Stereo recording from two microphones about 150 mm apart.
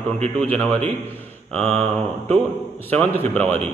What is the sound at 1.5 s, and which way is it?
Speech, 45° right (ahead or behind).